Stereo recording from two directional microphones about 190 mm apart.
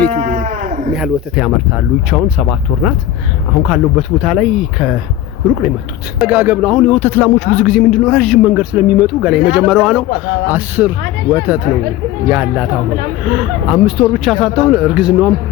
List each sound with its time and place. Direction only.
0.1 s livestock: 40° right (ahead or behind)
0.9 s speech: centre (ahead or behind)